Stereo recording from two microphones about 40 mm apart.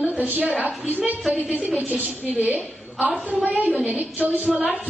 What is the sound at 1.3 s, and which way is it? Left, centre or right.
Music, right.